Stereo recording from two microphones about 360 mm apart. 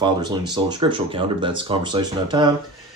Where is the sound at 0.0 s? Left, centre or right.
Centre.